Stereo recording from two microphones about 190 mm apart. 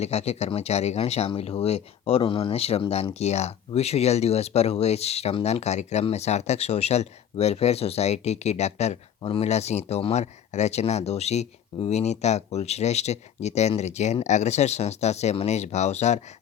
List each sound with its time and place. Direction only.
0.0 s speech: 35° left (ahead or behind)